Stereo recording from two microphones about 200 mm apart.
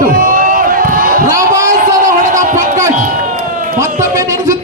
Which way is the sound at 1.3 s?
15° right (ahead or behind).